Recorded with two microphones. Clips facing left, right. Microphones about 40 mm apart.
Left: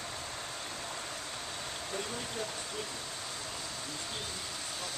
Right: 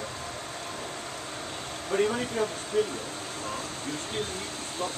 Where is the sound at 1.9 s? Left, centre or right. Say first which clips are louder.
Right 15 dB; right.